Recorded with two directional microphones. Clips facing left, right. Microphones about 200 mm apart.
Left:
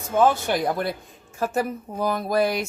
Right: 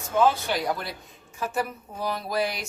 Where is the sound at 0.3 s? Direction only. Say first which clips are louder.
Left 3 dB; 50° left (ahead or behind).